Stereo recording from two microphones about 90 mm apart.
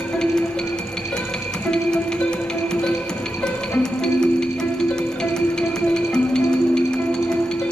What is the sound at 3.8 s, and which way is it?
Music, 5° left (ahead or behind).